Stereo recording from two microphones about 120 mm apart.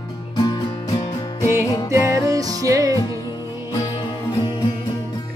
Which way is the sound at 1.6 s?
25° left (ahead or behind).